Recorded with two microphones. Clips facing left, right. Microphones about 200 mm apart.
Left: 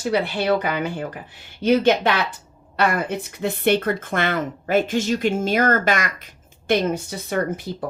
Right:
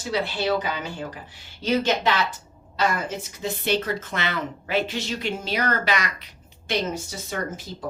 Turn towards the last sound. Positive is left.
turn(degrees=60)  # may be behind; listen again after turning